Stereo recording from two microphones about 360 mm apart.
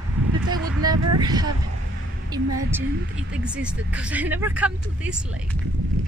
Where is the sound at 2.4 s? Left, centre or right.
Right.